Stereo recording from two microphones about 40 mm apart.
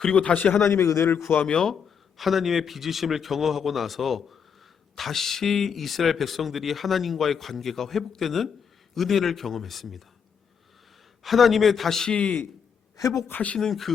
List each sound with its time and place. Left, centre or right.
0.1 s a man's voice: left
0.6 s a man's voice: left
1.5 s speech: centre
1.7 s speech: centre
11.2 s speech: centre
12.1 s a man's voice: left
13.6 s speech: centre